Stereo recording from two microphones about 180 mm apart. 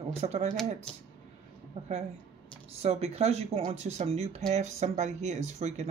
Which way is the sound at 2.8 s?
35° right (ahead or behind).